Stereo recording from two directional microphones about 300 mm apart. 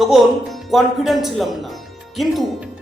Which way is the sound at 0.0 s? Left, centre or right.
Centre.